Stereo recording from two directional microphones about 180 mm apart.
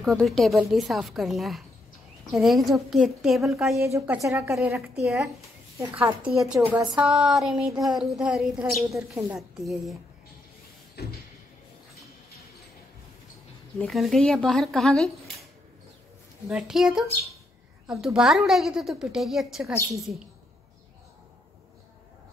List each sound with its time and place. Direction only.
0.0 s a woman's voice: centre (ahead or behind)
3.7 s a woman's voice: 15° right (ahead or behind)
7.7 s a sound: 20° right (ahead or behind)
8.0 s a woman's voice: centre (ahead or behind)
8.9 s a woman's voice: 15° right (ahead or behind)
11.0 s a sound: 65° left (ahead or behind)
13.7 s a woman's voice: centre (ahead or behind)
16.4 s a woman's voice: 5° right (ahead or behind)
18.0 s a woman's voice: 5° right (ahead or behind)